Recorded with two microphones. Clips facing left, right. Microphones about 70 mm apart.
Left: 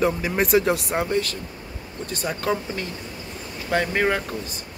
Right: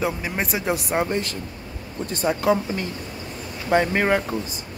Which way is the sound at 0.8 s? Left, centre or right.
Centre.